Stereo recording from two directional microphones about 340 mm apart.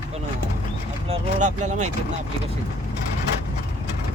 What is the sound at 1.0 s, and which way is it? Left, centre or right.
Speech, centre.